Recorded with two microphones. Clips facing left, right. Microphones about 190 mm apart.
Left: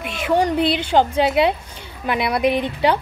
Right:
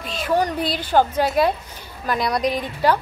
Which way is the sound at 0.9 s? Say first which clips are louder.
Even; 15° left (ahead or behind).